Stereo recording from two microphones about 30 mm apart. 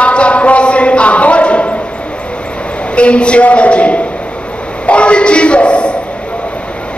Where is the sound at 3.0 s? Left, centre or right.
Left.